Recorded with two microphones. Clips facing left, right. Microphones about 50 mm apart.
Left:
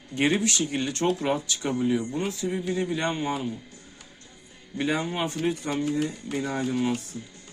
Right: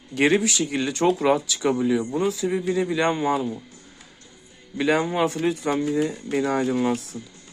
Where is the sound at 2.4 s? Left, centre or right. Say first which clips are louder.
Right 5 dB; right.